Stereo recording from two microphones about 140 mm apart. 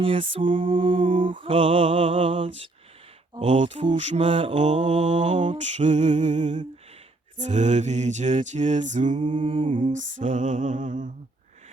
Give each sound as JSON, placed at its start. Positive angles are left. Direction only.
{"t": 0.0, "sound": "mantra", "side_deg": -45}
{"t": 3.4, "sound": "mantra", "side_deg": -55}
{"t": 9.3, "sound": "mantra", "side_deg": -40}
{"t": 9.6, "sound": "mantra", "side_deg": -65}